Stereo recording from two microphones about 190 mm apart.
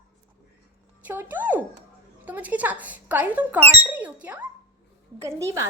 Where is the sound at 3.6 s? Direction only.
30° right (ahead or behind).